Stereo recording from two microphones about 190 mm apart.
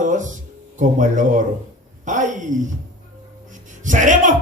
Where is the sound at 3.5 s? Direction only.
40° right (ahead or behind).